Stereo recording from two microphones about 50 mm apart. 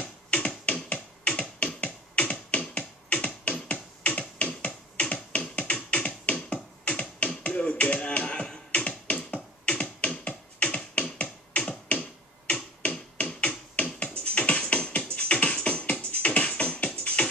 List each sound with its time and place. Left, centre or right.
0.0 s music: left
4.4 s music: left
11.5 s a sound: left
14.2 s music: left